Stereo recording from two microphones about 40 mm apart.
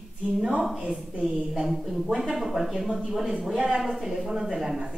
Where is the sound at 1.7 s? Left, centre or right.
Centre.